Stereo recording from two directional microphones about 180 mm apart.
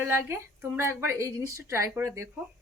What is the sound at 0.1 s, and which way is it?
Speech, 15° right (ahead or behind).